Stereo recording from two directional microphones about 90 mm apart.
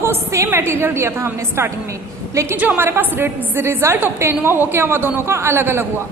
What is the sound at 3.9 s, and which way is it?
A woman's voice, 20° right (ahead or behind).